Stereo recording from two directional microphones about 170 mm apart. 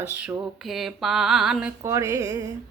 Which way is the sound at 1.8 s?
20° right (ahead or behind).